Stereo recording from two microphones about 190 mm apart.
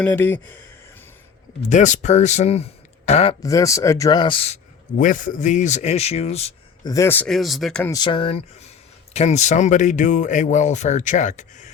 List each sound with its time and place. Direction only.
0.0 s speech: 10° left (ahead or behind)
1.7 s speech: 40° left (ahead or behind)
3.4 s speech: 15° left (ahead or behind); by 6.5 s 35° left (ahead or behind)
6.8 s speech: 15° left (ahead or behind)
7.9 s speech: 20° left (ahead or behind); by 11.7 s 40° left (ahead or behind)